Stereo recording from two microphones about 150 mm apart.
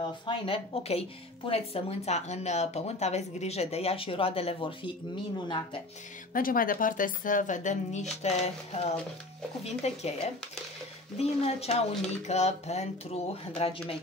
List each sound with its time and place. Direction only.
0.5 s a woman's voice: 40° left (ahead or behind)
6.3 s speech: 70° left (ahead or behind); by 13.7 s 45° left (ahead or behind)